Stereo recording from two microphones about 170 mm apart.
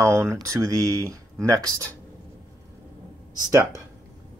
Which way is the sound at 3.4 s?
20° right (ahead or behind).